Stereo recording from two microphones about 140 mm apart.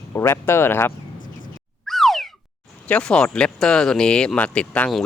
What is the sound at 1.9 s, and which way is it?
Cat, centre (ahead or behind).